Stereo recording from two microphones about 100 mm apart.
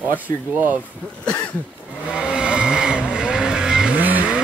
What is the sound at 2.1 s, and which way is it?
Vehicle, 10° right (ahead or behind).